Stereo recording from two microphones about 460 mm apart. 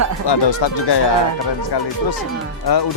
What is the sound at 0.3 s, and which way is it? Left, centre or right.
Speech, left.